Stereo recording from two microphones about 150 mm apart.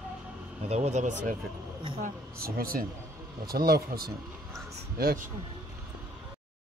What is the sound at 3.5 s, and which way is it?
Speech, 90° right.